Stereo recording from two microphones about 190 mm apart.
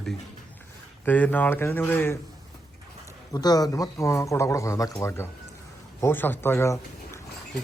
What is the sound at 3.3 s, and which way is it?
Speech, 20° left (ahead or behind).